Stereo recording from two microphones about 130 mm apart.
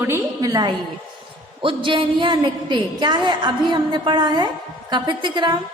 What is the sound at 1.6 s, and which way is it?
A woman's voice, 40° right (ahead or behind).